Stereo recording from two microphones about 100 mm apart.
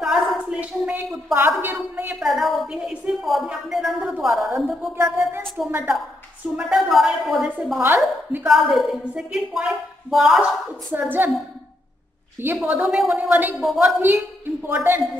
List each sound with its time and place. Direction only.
0.0 s a sound: 5° right (ahead or behind)
0.6 s a sound: 15° right (ahead or behind)
1.3 s a woman's voice: 20° right (ahead or behind)
2.1 s a woman's voice: centre (ahead or behind)
5.7 s a woman's voice: 15° right (ahead or behind)
6.6 s a woman's voice: centre (ahead or behind)
7.8 s a woman's voice: 20° right (ahead or behind)
8.5 s a woman's voice: centre (ahead or behind)
10.9 s a woman's voice: 20° right (ahead or behind)
12.6 s a woman's voice: 10° right (ahead or behind)
13.1 s a woman's voice: 15° right (ahead or behind)
13.6 s a woman's voice: 5° right (ahead or behind)
14.7 s a woman's voice: 20° right (ahead or behind)